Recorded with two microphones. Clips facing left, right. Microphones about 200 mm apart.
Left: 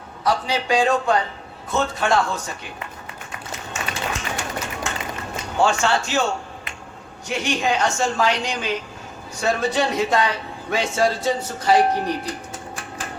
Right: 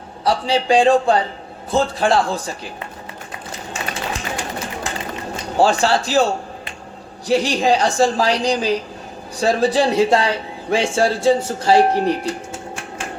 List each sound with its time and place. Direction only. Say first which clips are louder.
0.3 s a woman's voice: right 4 dB; 30° right (ahead or behind)
3.5 s a sound: right 2 dB; 35° right (ahead or behind)
5.5 s a woman's voice: right 4 dB; 35° right (ahead or behind)